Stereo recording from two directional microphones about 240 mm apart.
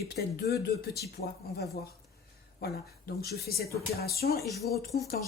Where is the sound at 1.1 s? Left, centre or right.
Left.